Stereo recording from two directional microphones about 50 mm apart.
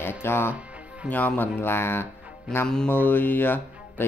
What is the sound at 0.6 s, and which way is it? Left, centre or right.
Music, right.